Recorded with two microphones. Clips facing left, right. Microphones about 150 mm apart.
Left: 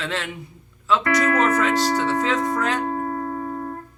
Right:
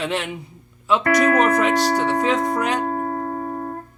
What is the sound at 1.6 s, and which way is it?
Speech, 15° right (ahead or behind).